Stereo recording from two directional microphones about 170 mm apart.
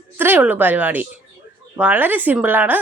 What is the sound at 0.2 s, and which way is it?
Speech, 10° right (ahead or behind).